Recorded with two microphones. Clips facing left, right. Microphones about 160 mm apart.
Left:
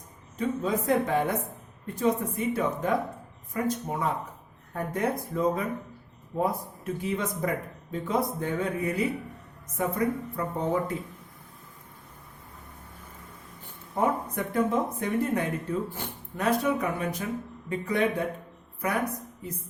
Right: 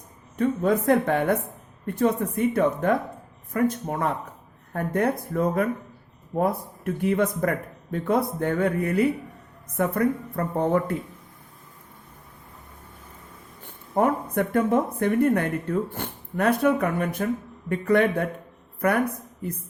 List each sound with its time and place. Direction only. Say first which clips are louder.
0.3 s speech: right 6 dB; 60° right (ahead or behind)
13.7 s a sound: right 5 dB; 60° right (ahead or behind)
14.3 s speech: right 5 dB; 55° right (ahead or behind)